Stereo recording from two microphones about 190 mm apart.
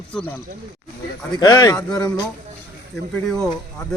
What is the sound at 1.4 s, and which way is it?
Speech, 20° left (ahead or behind).